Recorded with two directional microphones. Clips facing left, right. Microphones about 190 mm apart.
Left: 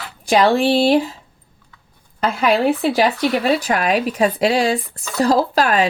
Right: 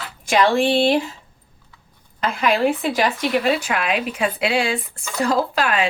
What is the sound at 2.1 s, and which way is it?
Speech, 35° left (ahead or behind).